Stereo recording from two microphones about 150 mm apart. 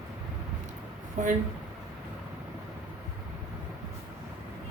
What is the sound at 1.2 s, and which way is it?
Speech, 60° right (ahead or behind).